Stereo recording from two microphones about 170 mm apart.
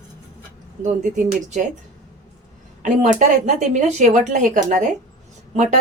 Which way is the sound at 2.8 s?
45° right (ahead or behind).